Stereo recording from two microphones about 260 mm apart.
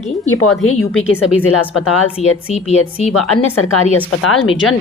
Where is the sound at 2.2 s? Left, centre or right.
Left.